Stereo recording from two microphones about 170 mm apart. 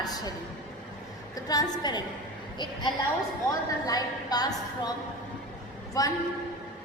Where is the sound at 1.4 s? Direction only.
25° left (ahead or behind).